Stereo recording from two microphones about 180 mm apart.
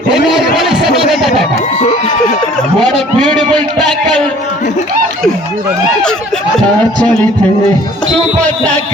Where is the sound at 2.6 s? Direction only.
5° left (ahead or behind).